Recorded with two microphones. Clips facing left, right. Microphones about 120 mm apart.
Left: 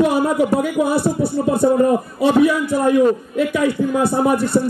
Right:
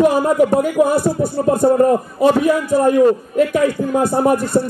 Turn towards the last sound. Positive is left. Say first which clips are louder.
# right 1 dB
turn(degrees=-45)  # may be behind; listen again after turning